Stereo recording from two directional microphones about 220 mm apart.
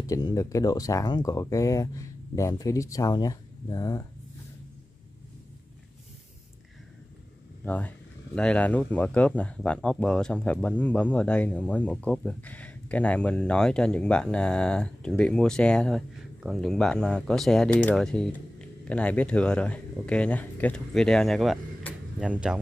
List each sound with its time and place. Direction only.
0.0 s speech: 15° left (ahead or behind)
7.6 s speech: 5° left (ahead or behind)